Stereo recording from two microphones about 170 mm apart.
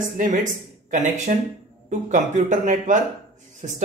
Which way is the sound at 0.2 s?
50° right (ahead or behind).